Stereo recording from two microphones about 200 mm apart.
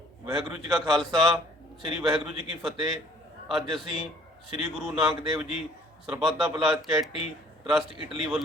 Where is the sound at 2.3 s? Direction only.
35° left (ahead or behind).